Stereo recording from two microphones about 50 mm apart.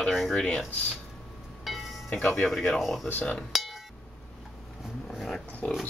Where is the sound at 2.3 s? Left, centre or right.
Centre.